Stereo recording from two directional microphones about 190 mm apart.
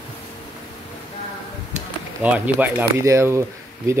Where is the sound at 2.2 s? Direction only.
5° right (ahead or behind).